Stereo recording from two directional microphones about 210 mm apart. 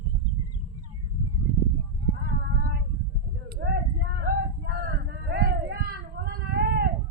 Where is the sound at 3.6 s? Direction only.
50° right (ahead or behind).